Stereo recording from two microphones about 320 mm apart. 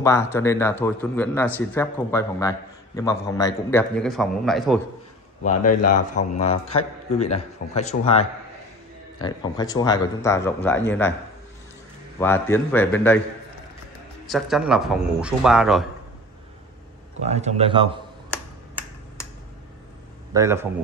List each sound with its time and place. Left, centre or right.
0.0 s a man's voice: centre
6.1 s a man's voice: centre
12.2 s a man's voice: centre
14.2 s a man's voice: centre
17.2 s a man's voice: right
18.3 s finger snapping: centre
20.3 s a man's voice: centre